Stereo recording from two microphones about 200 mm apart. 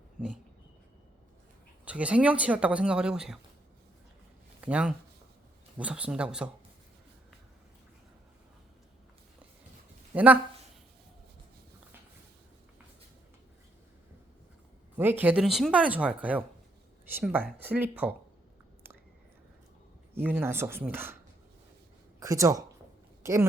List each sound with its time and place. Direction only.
1.8 s speech: 5° right (ahead or behind)
4.6 s speech: 5° right (ahead or behind)
10.1 s speech: 10° right (ahead or behind)
14.9 s speech: 10° right (ahead or behind)
20.1 s speech: 10° right (ahead or behind)
22.2 s speech: 15° right (ahead or behind)